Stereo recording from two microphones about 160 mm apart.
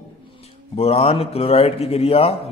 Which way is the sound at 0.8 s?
40° left (ahead or behind).